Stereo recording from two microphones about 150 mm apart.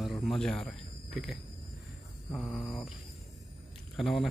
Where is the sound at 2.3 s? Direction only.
10° left (ahead or behind).